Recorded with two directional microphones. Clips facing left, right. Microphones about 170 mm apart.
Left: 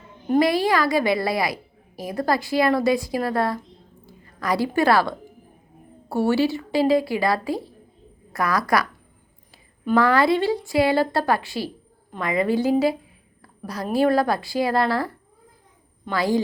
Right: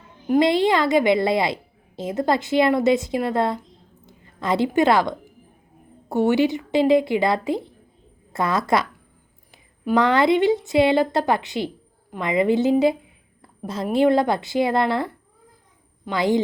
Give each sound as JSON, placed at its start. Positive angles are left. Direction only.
{"t": 0.3, "sound": "a woman's voice", "side_deg": -20}